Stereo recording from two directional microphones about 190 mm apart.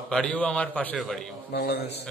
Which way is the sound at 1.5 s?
55° left (ahead or behind).